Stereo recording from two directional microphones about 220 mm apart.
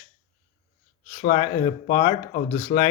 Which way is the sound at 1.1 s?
35° left (ahead or behind).